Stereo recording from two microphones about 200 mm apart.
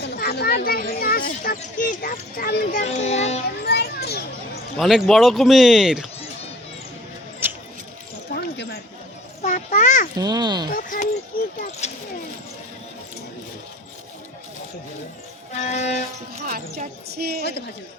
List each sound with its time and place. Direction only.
0.0 s speech: 50° left (ahead or behind); by 3.4 s 35° left (ahead or behind)
3.6 s children playing: 55° left (ahead or behind)
4.8 s speech: centre (ahead or behind)
7.4 s a sound: 10° right (ahead or behind)
8.3 s a sound: 55° left (ahead or behind)
9.4 s children playing: 40° left (ahead or behind)
10.2 s a child's voice: 20° right (ahead or behind)
10.7 s a sound: 45° left (ahead or behind)
11.8 s vehicle: 35° left (ahead or behind)
15.5 s music: 35° left (ahead or behind)
16.4 s music: 40° right (ahead or behind)
17.1 s a woman's voice: 50° right (ahead or behind)